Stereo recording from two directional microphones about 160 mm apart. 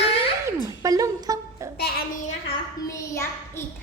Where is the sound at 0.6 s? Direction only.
20° right (ahead or behind).